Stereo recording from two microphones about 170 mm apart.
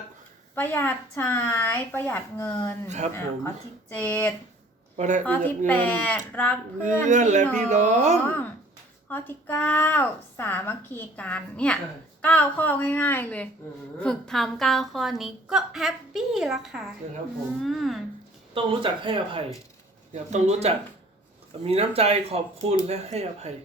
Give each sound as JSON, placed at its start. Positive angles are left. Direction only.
{"t": 0.5, "sound": "speech", "side_deg": 10}
{"t": 4.9, "sound": "speech", "side_deg": -45}
{"t": 5.2, "sound": "speech", "side_deg": 10}
{"t": 6.8, "sound": "speech", "side_deg": -45}
{"t": 8.3, "sound": "a woman's voice", "side_deg": 10}
{"t": 18.5, "sound": "speech", "side_deg": -30}
{"t": 20.1, "sound": "speech", "side_deg": -40}